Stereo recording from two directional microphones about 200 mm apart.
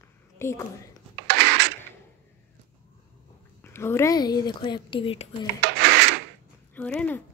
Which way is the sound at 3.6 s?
10° left (ahead or behind).